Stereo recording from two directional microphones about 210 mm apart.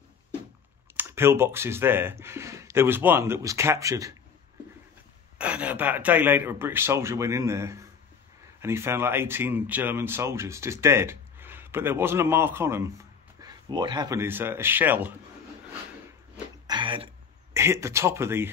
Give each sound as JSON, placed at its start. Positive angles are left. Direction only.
{"t": 0.9, "sound": "speech", "side_deg": -10}
{"t": 5.4, "sound": "speech", "side_deg": -5}
{"t": 16.6, "sound": "throat clearing", "side_deg": -20}
{"t": 17.6, "sound": "speech", "side_deg": -15}